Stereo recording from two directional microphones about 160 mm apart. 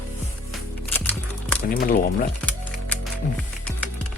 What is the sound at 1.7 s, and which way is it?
Speech, 65° left (ahead or behind).